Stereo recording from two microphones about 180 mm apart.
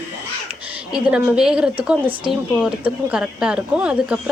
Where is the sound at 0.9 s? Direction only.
5° right (ahead or behind).